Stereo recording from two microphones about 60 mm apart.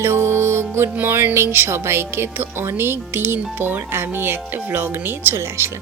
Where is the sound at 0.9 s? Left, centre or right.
Right.